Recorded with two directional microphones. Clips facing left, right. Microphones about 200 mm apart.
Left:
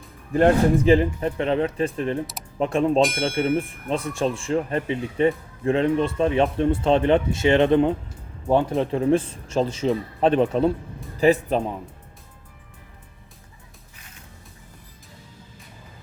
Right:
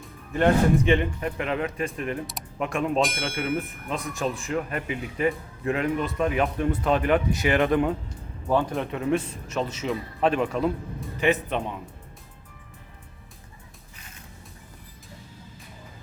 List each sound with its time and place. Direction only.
0.3 s speech: 35° left (ahead or behind)
3.0 s speech: centre (ahead or behind)
3.8 s speech: 30° left (ahead or behind)